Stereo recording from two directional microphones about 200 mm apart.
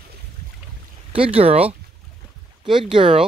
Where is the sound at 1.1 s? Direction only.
30° right (ahead or behind).